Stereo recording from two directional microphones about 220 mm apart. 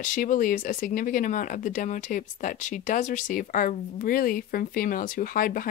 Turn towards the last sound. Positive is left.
turn(degrees=40)  # may be behind; listen again after turning